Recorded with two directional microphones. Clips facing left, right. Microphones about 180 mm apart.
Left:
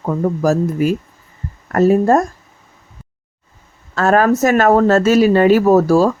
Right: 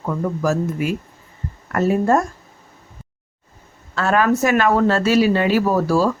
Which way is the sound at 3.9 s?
45° left (ahead or behind).